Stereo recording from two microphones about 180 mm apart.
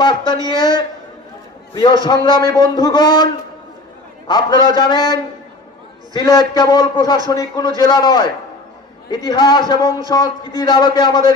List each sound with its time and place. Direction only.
0.0 s a man's voice: 25° left (ahead or behind)
4.3 s a man's voice: 25° left (ahead or behind)